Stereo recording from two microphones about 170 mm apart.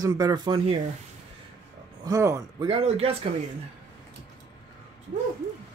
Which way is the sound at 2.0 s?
20° right (ahead or behind).